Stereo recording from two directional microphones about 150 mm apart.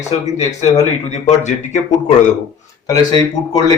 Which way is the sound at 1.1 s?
50° left (ahead or behind).